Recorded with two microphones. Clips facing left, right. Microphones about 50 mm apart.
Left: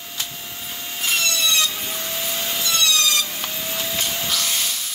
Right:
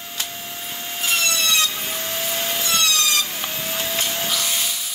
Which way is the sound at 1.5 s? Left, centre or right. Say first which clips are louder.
Right 1 dB; right.